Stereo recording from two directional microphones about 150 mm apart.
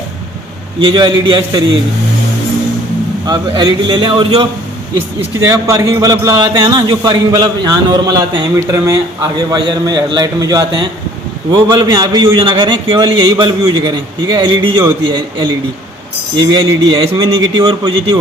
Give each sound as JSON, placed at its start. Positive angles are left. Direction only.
{"t": 0.8, "sound": "a man's voice", "side_deg": -30}
{"t": 3.2, "sound": "a man's voice", "side_deg": -30}
{"t": 5.4, "sound": "a man's voice", "side_deg": -20}